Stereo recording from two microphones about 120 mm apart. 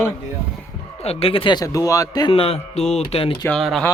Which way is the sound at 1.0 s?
55° left (ahead or behind).